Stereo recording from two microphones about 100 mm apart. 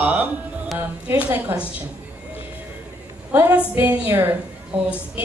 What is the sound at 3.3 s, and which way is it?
Speech, 15° right (ahead or behind).